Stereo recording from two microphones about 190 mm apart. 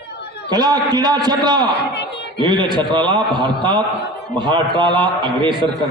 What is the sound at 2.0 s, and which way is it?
Chuckle, 65° left (ahead or behind).